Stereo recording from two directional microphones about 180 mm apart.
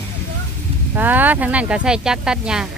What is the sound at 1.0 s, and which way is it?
Speech, 10° right (ahead or behind).